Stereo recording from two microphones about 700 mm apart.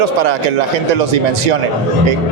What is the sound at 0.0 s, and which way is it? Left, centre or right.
Speech, right.